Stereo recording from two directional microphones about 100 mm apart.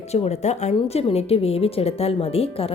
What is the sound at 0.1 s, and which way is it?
A woman's voice, 90° left.